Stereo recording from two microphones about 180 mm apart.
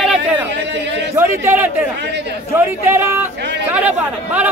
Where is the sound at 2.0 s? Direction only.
75° right (ahead or behind).